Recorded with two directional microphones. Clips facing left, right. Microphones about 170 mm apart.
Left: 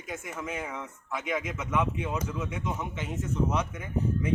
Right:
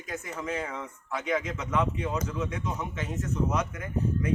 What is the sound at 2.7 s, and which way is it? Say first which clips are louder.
Speech: even; 20° left (ahead or behind).